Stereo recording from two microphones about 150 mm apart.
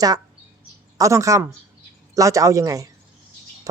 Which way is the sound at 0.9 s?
20° right (ahead or behind).